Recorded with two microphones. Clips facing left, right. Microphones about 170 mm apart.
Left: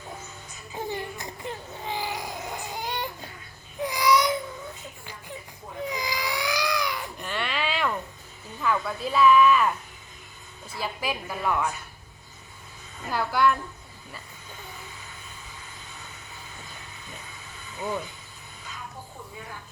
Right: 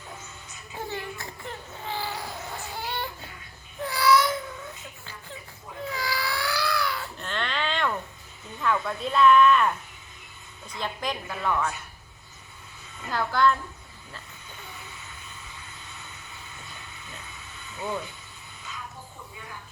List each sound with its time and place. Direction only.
0.7 s a sound: 15° left (ahead or behind)
3.8 s babbling: 15° left (ahead or behind)
5.8 s cat: 15° left (ahead or behind)
8.6 s a woman's voice: 5° left (ahead or behind)
13.1 s a woman's voice: 10° left (ahead or behind)